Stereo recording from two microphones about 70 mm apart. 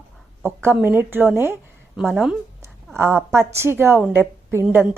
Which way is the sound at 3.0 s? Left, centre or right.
Right.